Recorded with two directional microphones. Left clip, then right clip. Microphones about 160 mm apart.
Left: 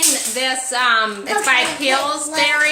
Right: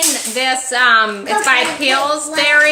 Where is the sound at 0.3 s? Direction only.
35° right (ahead or behind).